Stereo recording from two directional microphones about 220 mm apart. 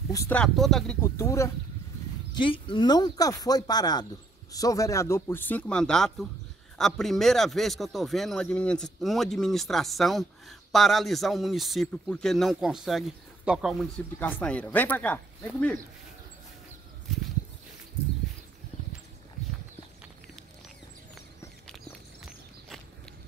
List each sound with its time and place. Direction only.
0.1 s speech: 10° left (ahead or behind)